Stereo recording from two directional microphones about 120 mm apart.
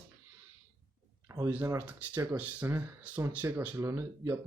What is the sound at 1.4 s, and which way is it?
Speech, 15° right (ahead or behind).